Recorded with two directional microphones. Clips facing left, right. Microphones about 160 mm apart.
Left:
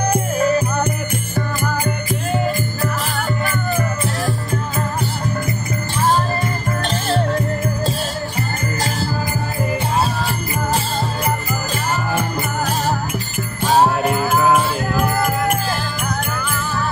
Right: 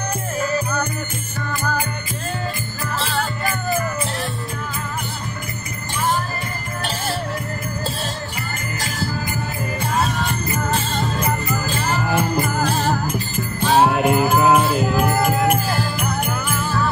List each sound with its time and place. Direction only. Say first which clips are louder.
10.0 s music: left 1 dB; 35° left (ahead or behind)
13.7 s music: even; 15° right (ahead or behind)
15.2 s music: right 1 dB; centre (ahead or behind)